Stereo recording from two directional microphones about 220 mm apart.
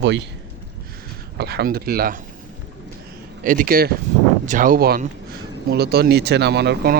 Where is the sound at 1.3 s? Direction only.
45° right (ahead or behind).